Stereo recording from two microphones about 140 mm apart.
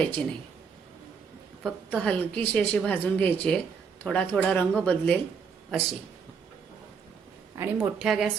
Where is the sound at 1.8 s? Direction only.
10° left (ahead or behind).